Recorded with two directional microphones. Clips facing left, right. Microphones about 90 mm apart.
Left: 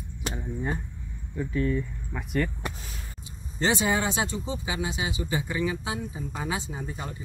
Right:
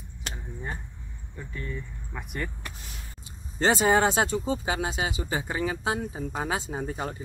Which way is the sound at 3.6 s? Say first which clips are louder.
Right 4 dB; 40° right (ahead or behind).